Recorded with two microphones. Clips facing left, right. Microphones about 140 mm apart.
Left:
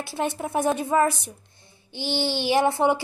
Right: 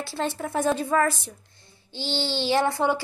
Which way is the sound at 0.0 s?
20° left (ahead or behind).